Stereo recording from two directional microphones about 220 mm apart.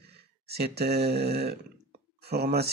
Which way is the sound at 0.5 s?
45° right (ahead or behind).